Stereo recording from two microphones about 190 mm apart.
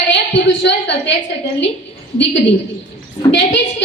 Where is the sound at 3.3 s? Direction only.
70° left (ahead or behind).